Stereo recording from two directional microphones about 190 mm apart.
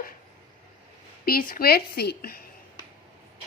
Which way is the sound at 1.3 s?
50° left (ahead or behind).